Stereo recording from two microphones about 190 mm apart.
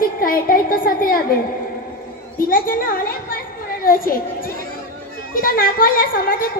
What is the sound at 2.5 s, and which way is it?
A woman's voice, 50° left (ahead or behind).